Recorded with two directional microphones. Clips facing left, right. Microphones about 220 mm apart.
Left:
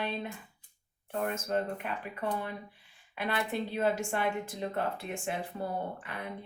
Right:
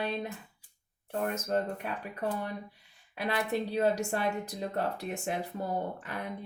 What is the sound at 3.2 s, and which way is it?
Speech, 35° right (ahead or behind).